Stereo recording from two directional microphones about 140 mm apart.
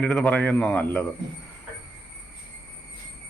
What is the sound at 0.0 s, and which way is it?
Speech, 5° left (ahead or behind).